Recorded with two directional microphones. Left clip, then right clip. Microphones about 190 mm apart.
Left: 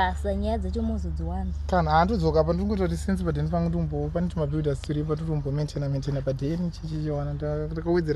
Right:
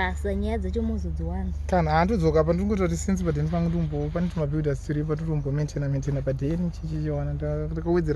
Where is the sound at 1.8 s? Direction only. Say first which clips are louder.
Left 1 dB; 50° right (ahead or behind).